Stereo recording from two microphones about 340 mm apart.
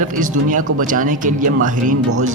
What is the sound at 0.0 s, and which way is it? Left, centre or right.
Speech, right.